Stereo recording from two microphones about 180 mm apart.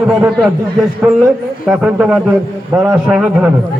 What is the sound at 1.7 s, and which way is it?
A man's voice, 5° right (ahead or behind).